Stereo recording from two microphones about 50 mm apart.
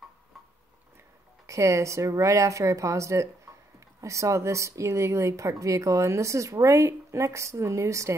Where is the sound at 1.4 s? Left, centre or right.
Right.